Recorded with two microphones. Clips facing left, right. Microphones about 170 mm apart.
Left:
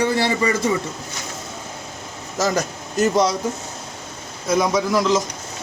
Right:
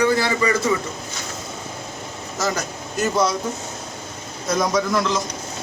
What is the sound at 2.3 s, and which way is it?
Speech, 40° left (ahead or behind).